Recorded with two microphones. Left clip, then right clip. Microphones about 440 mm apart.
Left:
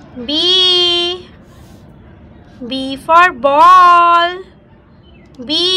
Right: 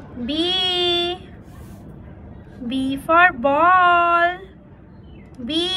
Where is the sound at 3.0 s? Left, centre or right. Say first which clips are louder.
Left 6 dB; centre.